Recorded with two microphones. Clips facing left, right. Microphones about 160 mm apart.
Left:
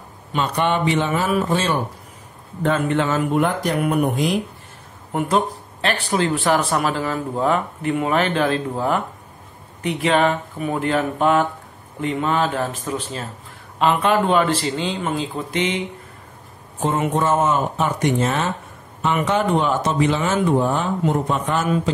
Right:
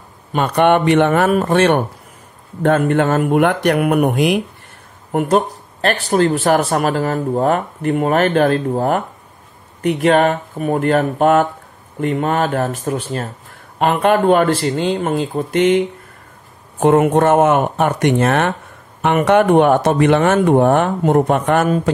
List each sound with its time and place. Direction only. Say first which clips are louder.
0.3 s speech: right 7 dB; 55° right (ahead or behind)
2.6 s speech: right 5 dB; 55° right (ahead or behind)
5.1 s speech: right 5 dB; 50° right (ahead or behind)
16.8 s speech: right 8 dB; 65° right (ahead or behind)
21.6 s speech: right 4 dB; 45° right (ahead or behind)